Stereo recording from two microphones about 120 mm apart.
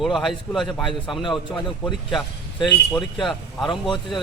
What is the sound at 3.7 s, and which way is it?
Speech, 40° left (ahead or behind).